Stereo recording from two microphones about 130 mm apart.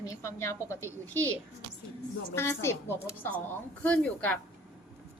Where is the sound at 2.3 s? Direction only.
20° left (ahead or behind).